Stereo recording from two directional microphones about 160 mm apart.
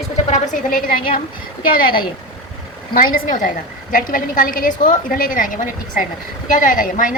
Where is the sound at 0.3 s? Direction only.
50° left (ahead or behind).